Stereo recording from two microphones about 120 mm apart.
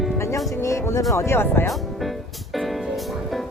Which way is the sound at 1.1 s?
20° left (ahead or behind).